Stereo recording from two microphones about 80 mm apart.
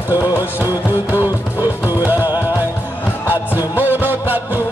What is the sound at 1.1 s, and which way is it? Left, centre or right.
Music, right.